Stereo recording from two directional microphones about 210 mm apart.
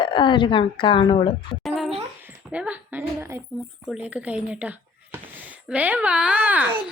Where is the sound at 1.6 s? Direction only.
Centre (ahead or behind).